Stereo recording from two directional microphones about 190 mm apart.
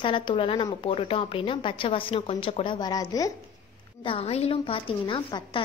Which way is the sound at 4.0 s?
30° left (ahead or behind).